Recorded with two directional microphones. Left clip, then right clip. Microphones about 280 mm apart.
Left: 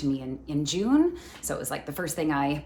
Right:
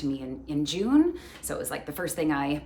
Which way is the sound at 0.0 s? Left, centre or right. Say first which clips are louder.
Left 2 dB; centre.